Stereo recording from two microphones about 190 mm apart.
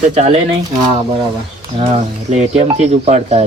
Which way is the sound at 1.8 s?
35° right (ahead or behind).